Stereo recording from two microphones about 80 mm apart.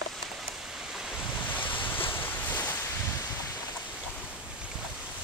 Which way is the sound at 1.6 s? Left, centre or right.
Left.